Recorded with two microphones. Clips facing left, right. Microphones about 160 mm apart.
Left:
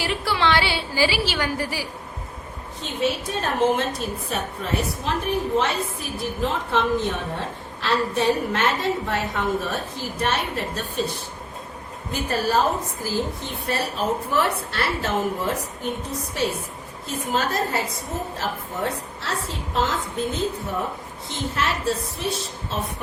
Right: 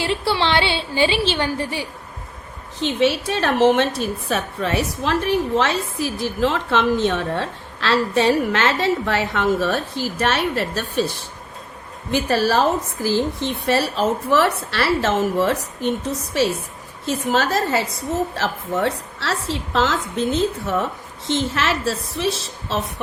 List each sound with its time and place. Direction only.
0.0 s a sound: 30° right (ahead or behind)
2.8 s a woman's voice: 90° right
12.1 s a woman's voice: 90° right